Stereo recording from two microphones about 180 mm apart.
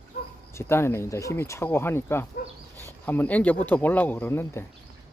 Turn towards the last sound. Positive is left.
turn(degrees=10)  # may be behind; listen again after turning